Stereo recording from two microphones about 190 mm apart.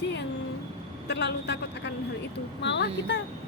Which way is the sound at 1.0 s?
60° left (ahead or behind).